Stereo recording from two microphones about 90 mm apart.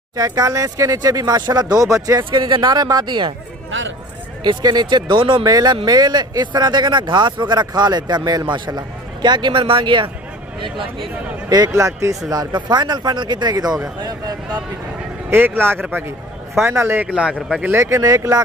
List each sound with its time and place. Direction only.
0.1 s speech: 45° right (ahead or behind)
2.3 s speech: 55° right (ahead or behind)
4.4 s speech: 55° right (ahead or behind)
5.4 s speech: 45° right (ahead or behind); by 10.1 s 70° right (ahead or behind)
11.4 s speech: 40° right (ahead or behind)
12.3 s speech: 50° right (ahead or behind)
15.2 s speech: 25° right (ahead or behind)
17.1 s a man's voice: 10° right (ahead or behind)
17.7 s speech: 35° right (ahead or behind)